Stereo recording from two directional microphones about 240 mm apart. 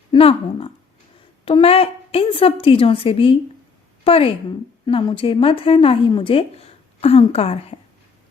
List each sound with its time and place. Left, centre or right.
0.1 s speech: left